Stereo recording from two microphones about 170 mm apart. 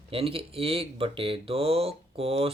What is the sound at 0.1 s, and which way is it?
Speech, 35° right (ahead or behind).